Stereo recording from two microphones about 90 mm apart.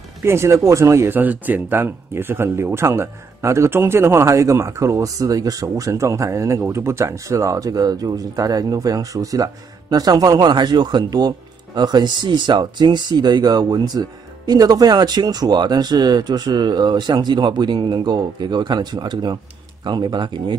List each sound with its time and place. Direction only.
0.2 s speech: 30° right (ahead or behind); by 20.5 s 60° right (ahead or behind)